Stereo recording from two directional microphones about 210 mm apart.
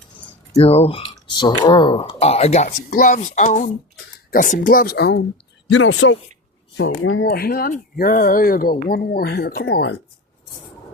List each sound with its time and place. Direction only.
0.5 s speech: 25° left (ahead or behind); by 5.2 s 50° left (ahead or behind)
5.7 s speech: 65° left (ahead or behind)
7.3 s speech: 45° left (ahead or behind)